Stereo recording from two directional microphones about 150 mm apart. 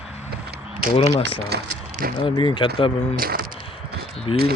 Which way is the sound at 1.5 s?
90° right.